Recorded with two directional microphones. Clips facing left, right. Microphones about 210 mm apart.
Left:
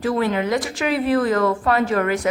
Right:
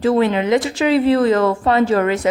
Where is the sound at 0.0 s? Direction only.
25° right (ahead or behind).